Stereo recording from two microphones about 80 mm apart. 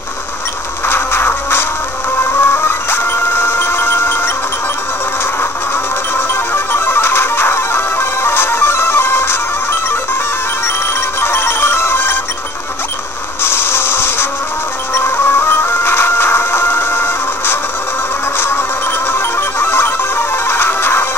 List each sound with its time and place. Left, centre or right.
0.8 s music: left
6.1 s music: left
11.1 s ringtone: left
13.4 s mechanisms: left
15.0 s music: left
19.1 s music: left